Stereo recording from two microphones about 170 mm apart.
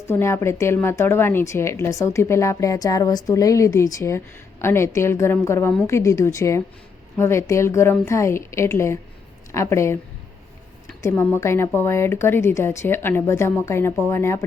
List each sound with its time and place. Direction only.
0.1 s a woman's voice: 15° left (ahead or behind)
11.0 s a woman's voice: 10° left (ahead or behind)